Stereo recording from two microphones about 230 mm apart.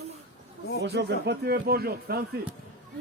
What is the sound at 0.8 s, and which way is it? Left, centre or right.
Speech, right.